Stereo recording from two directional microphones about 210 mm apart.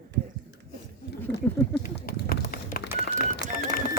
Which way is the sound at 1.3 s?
45° right (ahead or behind).